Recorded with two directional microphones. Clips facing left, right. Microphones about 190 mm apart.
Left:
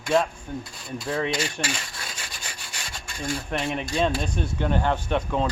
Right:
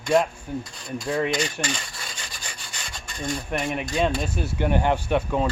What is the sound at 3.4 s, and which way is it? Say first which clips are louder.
Rub: right 1 dB; 5° right (ahead or behind).